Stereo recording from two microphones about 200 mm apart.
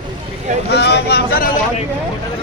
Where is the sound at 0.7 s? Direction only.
55° left (ahead or behind).